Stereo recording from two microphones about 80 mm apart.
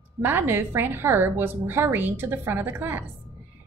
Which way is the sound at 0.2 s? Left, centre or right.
Right.